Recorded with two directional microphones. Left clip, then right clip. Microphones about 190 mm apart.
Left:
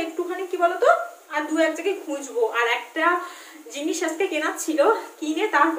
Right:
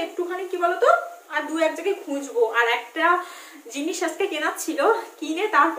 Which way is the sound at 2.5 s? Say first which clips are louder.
Right 1 dB; centre (ahead or behind).